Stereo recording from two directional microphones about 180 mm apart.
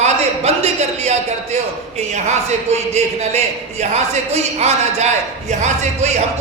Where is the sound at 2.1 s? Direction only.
40° right (ahead or behind).